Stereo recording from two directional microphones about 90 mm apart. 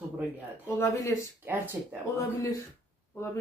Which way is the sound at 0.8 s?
30° left (ahead or behind).